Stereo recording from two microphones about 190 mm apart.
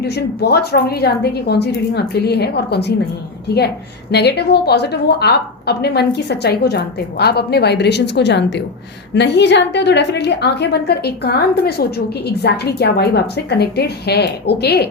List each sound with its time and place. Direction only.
0.0 s a woman's voice: 60° left (ahead or behind)
4.1 s a woman's voice: 60° left (ahead or behind)